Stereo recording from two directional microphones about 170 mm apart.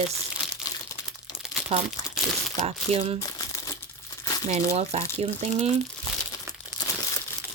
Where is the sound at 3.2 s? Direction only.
20° left (ahead or behind).